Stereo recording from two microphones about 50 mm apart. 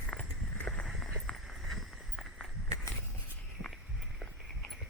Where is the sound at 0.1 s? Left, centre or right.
Left.